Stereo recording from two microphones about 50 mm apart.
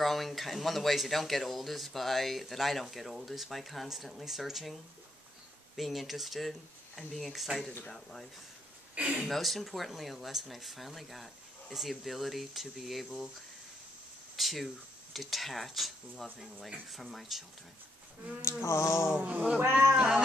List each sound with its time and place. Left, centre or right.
0.0 s speech: centre
5.8 s speech: centre
8.9 s speech: right
9.3 s speech: centre
14.3 s speech: centre
18.4 s a sound: left
19.6 s speech: right
20.0 s a sound: centre